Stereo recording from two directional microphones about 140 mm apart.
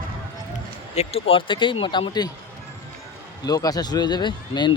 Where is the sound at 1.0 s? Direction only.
45° left (ahead or behind).